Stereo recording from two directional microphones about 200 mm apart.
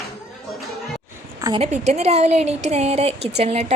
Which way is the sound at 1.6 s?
35° right (ahead or behind).